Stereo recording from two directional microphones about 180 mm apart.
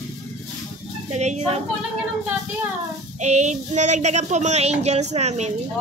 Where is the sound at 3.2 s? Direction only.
40° right (ahead or behind).